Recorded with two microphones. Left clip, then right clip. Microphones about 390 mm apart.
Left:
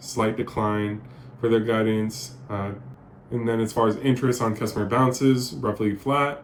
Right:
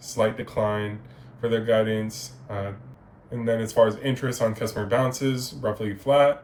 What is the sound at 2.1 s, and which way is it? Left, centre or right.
Speech, centre.